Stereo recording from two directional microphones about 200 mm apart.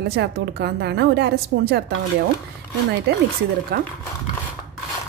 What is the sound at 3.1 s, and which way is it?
Speech, 55° right (ahead or behind).